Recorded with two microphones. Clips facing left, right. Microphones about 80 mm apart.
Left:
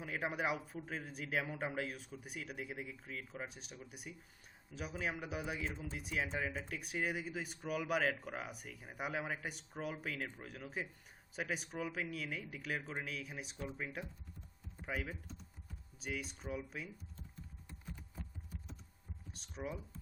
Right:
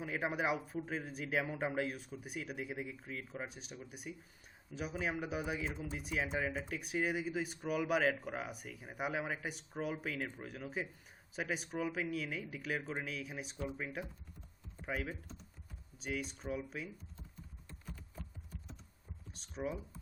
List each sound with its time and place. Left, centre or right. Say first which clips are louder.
0.0 s speech: right 2 dB; centre
19.3 s speech: right 4 dB; centre